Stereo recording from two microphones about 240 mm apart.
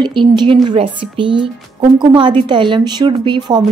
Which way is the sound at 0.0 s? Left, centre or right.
Centre.